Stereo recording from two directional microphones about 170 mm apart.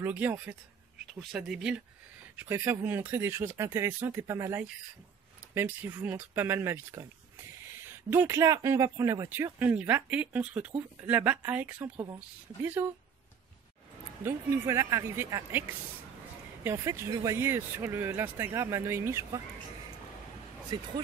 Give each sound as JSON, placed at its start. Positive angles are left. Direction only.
{"t": 0.0, "sound": "speech", "side_deg": -10}
{"t": 14.2, "sound": "speech", "side_deg": -15}
{"t": 16.6, "sound": "speech", "side_deg": -15}